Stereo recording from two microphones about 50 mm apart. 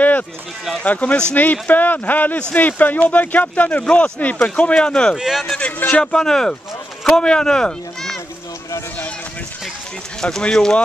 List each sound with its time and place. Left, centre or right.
0.8 s speech: left
3.8 s speech: centre
4.2 s speech: left
4.7 s speech: centre
5.1 s speech: centre
5.6 s speech: left
6.1 s speech: centre
10.4 s speech: centre